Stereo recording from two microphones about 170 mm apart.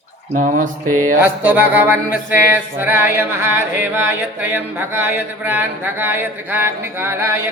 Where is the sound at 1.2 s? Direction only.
10° right (ahead or behind).